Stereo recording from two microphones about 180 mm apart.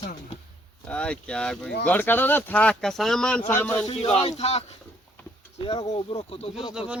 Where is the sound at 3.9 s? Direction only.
35° left (ahead or behind).